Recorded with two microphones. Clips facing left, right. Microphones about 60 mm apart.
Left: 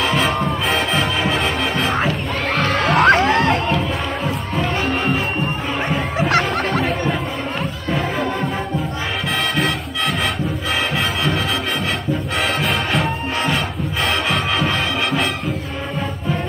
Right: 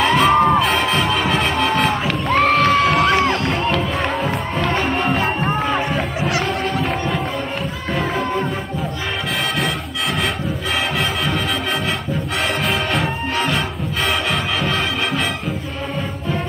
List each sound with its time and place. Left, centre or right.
0.0 s music: centre
0.3 s music: right
0.6 s music: centre
2.8 s crowd: left
6.1 s music: left
12.6 s music: centre